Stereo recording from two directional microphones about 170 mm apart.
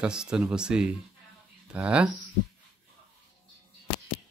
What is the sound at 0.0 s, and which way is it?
Speech, 5° right (ahead or behind).